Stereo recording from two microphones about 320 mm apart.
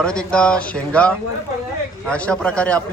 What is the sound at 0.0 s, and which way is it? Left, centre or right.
A man's voice, centre.